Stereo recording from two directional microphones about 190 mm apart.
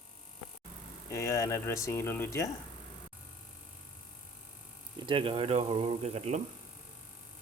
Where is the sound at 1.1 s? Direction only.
15° left (ahead or behind).